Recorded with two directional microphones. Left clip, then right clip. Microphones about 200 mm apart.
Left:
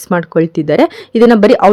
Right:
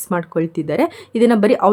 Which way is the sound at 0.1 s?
35° left (ahead or behind).